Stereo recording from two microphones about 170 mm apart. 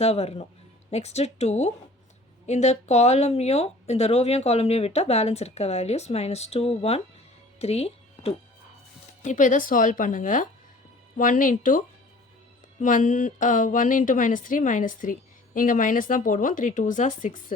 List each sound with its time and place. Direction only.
0.0 s speech: 35° left (ahead or behind)
7.6 s music: 35° left (ahead or behind)
9.2 s speech: 50° left (ahead or behind)
12.8 s speech: 50° left (ahead or behind)